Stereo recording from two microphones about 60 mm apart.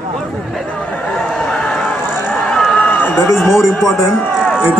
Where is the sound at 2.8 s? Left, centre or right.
Left.